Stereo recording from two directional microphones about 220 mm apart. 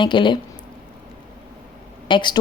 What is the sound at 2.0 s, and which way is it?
Speech, 20° left (ahead or behind).